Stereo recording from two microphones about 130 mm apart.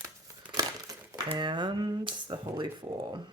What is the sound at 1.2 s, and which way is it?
Speech, 40° right (ahead or behind).